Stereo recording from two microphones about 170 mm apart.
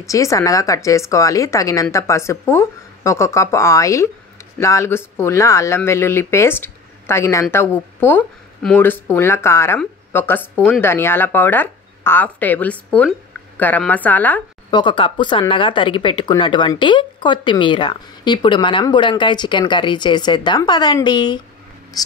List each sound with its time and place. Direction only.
0.0 s speech: 20° left (ahead or behind)
14.7 s speech: 30° left (ahead or behind)